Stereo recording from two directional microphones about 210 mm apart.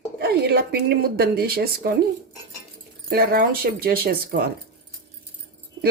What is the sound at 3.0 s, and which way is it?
Speech, 45° right (ahead or behind).